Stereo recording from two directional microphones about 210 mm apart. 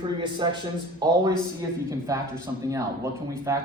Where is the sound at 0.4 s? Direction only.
20° right (ahead or behind).